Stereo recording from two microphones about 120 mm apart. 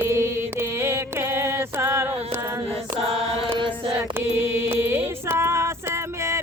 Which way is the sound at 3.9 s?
20° right (ahead or behind).